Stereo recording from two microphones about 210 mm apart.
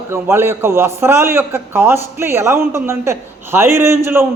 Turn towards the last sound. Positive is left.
turn(degrees=-10)  # may be behind; listen again after turning